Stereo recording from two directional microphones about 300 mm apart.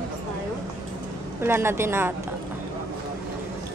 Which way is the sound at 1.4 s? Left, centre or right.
Centre.